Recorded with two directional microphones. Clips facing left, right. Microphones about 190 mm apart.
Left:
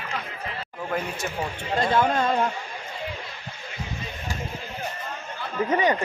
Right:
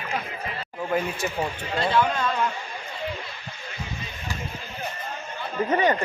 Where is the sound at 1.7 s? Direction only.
45° left (ahead or behind).